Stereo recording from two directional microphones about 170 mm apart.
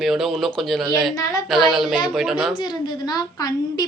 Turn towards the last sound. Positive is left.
turn(degrees=25)  # may be behind; listen again after turning